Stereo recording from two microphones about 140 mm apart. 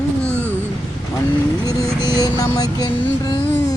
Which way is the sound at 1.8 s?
20° right (ahead or behind).